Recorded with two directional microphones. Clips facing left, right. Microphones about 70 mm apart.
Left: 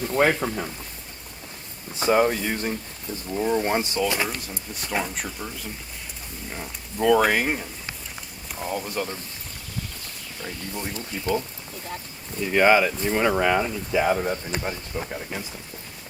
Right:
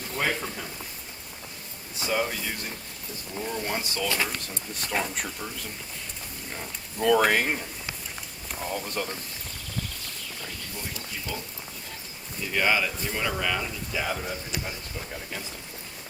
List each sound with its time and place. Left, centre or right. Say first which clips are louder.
0.2 s speech: left 8 dB; left
2.0 s speech: left 8 dB; left
3.4 s speech: left 8 dB; left
4.0 s speech: left 3 dB; centre
4.7 s speech: left 2 dB; centre
10.9 s speech: left 13 dB; left
12.5 s speech: left 7 dB; left
15.1 s speech: left 4 dB; left